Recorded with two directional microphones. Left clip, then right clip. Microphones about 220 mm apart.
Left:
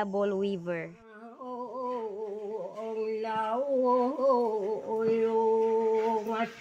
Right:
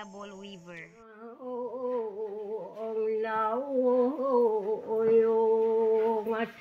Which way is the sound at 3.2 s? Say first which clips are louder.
Right 1 dB; 10° left (ahead or behind).